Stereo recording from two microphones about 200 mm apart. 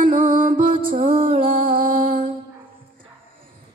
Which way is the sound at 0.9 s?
25° right (ahead or behind).